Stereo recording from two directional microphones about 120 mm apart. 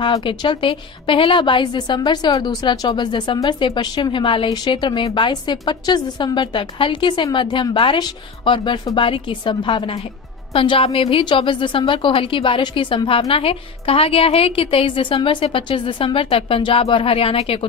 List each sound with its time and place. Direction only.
0.0 s a woman's voice: 45° left (ahead or behind)